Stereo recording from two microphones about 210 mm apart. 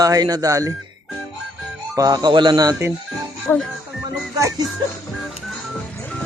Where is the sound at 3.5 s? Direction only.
15° left (ahead or behind).